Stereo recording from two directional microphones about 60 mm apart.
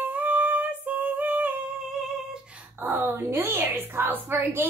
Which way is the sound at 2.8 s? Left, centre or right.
Right.